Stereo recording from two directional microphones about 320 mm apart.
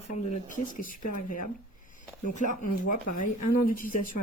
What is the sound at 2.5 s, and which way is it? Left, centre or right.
Speech, left.